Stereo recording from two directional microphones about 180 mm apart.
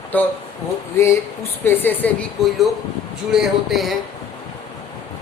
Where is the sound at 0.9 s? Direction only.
15° left (ahead or behind); by 3.9 s centre (ahead or behind).